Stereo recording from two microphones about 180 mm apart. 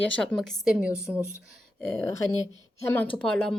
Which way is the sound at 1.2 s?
15° left (ahead or behind).